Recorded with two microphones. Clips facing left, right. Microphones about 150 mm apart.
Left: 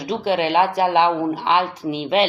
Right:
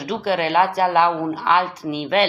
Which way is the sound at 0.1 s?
20° left (ahead or behind).